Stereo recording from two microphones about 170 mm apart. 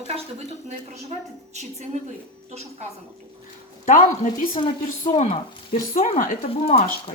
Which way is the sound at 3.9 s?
50° left (ahead or behind).